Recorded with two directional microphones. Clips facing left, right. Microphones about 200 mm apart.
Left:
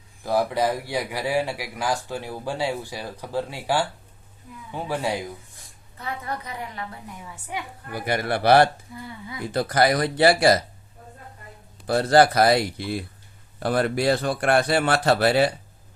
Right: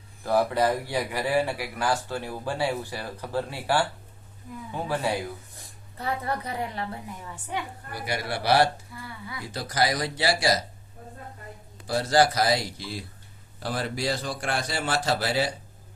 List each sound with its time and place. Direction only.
0.2 s speech: 10° left (ahead or behind)
6.0 s a woman's voice: 35° right (ahead or behind)
7.5 s speech: 10° left (ahead or behind)
7.9 s speech: 55° left (ahead or behind)
9.0 s speech: 20° left (ahead or behind)
9.5 s speech: 55° left (ahead or behind)
11.9 s speech: 60° left (ahead or behind)